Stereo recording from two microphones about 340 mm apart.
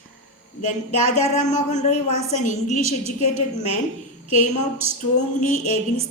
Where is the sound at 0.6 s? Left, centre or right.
Centre.